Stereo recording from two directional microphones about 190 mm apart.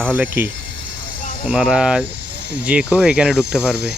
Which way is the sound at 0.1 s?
10° right (ahead or behind).